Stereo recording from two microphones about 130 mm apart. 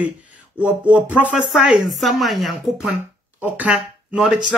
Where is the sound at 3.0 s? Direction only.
15° right (ahead or behind).